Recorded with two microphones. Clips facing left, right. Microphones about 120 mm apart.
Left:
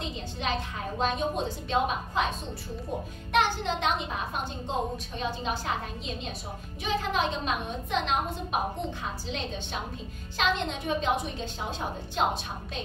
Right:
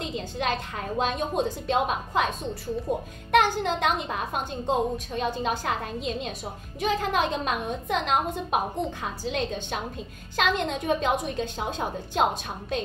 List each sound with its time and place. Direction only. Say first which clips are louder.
0.0 s a sound: right 4 dB; 55° right (ahead or behind)
1.0 s a woman's voice: right 1 dB; 55° right (ahead or behind)
3.3 s a woman's voice: right 4 dB; 50° right (ahead or behind)